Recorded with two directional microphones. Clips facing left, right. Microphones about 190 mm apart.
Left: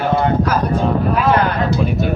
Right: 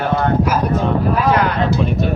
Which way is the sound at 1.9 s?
5° left (ahead or behind).